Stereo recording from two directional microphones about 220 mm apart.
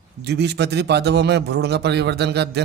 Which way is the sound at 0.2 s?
50° right (ahead or behind).